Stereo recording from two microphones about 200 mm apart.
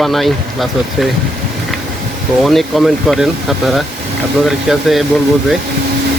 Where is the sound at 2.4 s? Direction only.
Centre (ahead or behind).